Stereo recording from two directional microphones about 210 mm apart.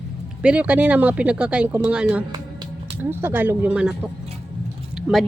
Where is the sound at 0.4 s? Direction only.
5° right (ahead or behind).